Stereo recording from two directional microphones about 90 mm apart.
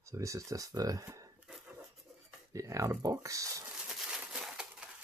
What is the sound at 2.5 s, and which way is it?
Speech, 35° right (ahead or behind).